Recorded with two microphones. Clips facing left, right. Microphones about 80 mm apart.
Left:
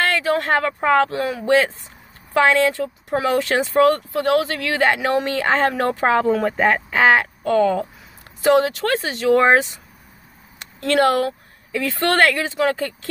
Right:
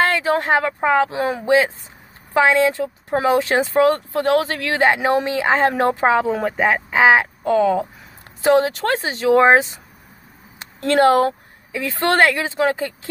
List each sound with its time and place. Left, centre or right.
0.0 s a sound: right
0.5 s speech: centre
6.0 s speech: centre
8.4 s speech: right